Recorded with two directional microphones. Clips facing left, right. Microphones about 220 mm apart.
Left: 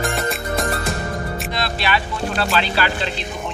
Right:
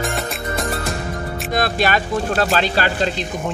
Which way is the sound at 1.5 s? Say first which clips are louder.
Right 5 dB; 45° right (ahead or behind).